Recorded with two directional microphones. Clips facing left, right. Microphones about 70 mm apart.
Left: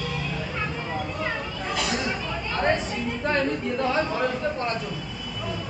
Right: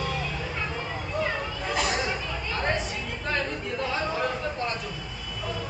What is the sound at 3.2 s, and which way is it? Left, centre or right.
Chatter, left.